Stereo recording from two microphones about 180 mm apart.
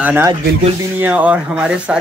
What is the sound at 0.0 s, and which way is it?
Speech, 10° right (ahead or behind).